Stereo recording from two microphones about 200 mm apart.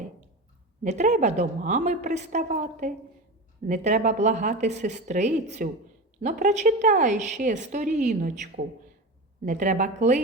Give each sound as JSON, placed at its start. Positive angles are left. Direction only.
{"t": 0.8, "sound": "a woman's voice", "side_deg": -35}